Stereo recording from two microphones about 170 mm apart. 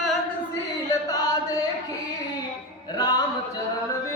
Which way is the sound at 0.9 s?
20° left (ahead or behind).